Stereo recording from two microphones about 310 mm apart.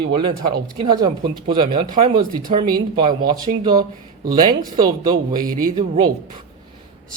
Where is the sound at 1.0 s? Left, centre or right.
Centre.